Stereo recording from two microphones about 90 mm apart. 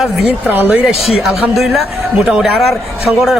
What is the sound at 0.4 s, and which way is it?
Speech, 20° right (ahead or behind).